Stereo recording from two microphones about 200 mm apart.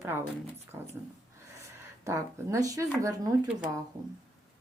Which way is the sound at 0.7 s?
15° right (ahead or behind).